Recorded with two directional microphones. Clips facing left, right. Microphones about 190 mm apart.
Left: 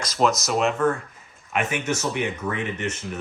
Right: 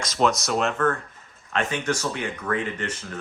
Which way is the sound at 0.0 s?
Centre (ahead or behind).